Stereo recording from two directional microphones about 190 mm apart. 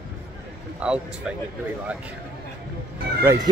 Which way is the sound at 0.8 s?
5° right (ahead or behind).